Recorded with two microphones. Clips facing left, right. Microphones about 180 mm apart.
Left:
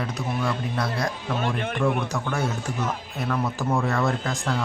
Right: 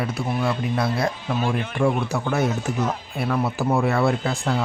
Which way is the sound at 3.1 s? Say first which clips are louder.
Right 3 dB; 10° right (ahead or behind).